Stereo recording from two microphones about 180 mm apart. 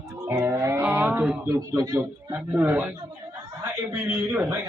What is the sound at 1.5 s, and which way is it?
A man's voice, 20° right (ahead or behind).